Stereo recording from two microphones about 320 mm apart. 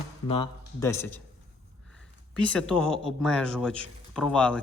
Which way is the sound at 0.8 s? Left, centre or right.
Centre.